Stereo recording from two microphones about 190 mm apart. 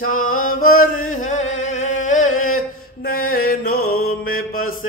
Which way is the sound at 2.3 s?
90° left.